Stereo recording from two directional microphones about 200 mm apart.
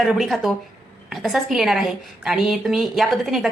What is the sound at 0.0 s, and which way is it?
A woman's voice, centre (ahead or behind).